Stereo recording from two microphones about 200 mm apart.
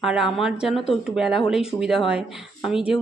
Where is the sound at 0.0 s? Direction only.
Centre (ahead or behind).